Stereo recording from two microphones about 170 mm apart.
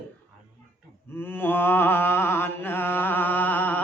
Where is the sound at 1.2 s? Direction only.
10° left (ahead or behind).